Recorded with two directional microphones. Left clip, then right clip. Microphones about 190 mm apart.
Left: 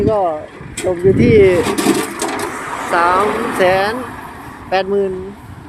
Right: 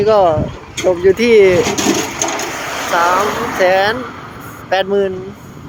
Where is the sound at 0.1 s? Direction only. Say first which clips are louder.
Right 8 dB; 25° right (ahead or behind).